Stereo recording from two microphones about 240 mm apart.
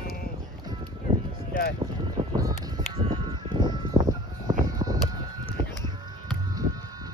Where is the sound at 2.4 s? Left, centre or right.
Centre.